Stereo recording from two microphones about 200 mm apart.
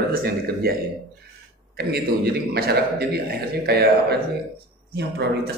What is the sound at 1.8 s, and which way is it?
A man's voice, 50° right (ahead or behind).